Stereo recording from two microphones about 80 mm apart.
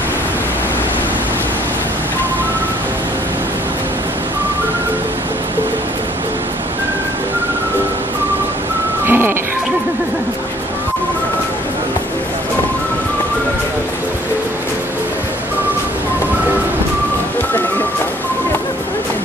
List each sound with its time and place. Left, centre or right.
9.0 s music: right